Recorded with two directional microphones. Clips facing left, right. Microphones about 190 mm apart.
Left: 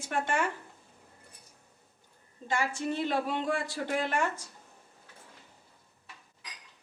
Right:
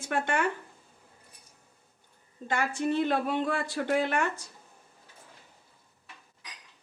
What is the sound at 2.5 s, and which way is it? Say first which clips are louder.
Speech: right 3 dB; 60° right (ahead or behind).